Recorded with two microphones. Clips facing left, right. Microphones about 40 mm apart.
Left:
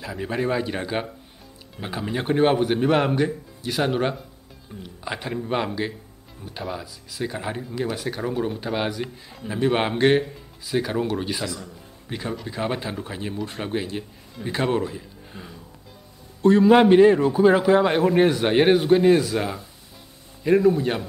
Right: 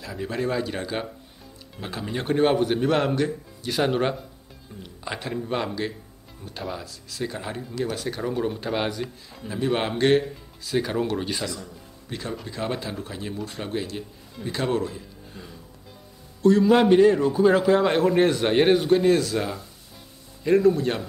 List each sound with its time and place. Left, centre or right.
0.0 s a man's voice: centre
3.6 s a man's voice: centre
9.5 s a man's voice: centre
10.7 s speech: centre
12.1 s a man's voice: centre
16.4 s a man's voice: left